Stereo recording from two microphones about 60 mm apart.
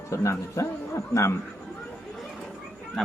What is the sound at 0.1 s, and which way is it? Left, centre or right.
A man's voice, left.